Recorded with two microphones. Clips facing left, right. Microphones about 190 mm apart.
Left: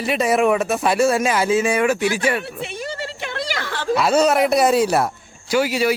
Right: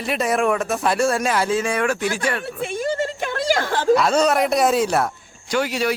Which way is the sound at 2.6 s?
45° right (ahead or behind).